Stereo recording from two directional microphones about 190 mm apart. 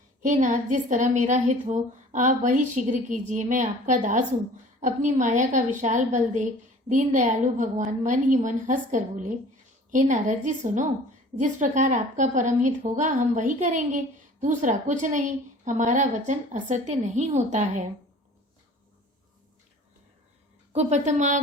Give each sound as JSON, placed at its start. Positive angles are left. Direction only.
{"t": 0.2, "sound": "a woman's voice", "side_deg": -40}
{"t": 20.7, "sound": "a woman's voice", "side_deg": -40}